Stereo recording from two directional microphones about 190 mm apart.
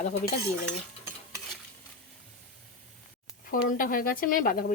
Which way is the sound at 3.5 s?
50° left (ahead or behind).